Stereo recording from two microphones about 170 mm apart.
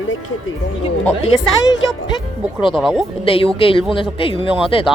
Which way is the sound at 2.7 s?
Centre (ahead or behind).